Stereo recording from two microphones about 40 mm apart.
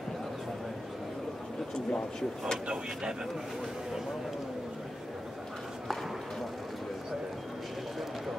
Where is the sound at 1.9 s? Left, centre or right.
Left.